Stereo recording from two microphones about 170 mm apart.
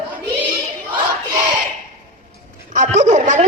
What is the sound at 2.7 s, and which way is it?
Speech, 45° right (ahead or behind).